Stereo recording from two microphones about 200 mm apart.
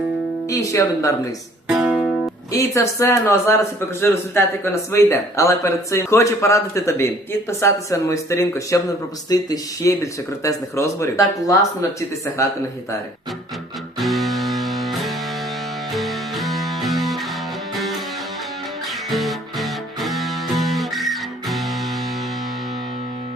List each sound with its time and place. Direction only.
0.5 s a man's voice: 15° left (ahead or behind)
1.6 s music: centre (ahead or behind)
2.5 s a man's voice: 15° left (ahead or behind)
14.0 s music: centre (ahead or behind)
19.1 s music: centre (ahead or behind)